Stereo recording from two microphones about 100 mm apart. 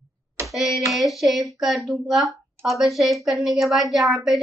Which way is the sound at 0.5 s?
Centre (ahead or behind).